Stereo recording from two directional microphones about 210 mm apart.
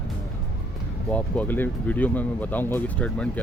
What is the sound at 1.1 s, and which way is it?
Speech, 5° left (ahead or behind).